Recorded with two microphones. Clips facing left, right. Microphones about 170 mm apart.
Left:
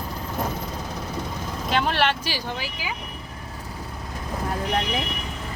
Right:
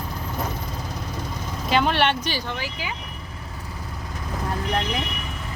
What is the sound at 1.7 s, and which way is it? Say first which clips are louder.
Speech: right 2 dB; centre (ahead or behind).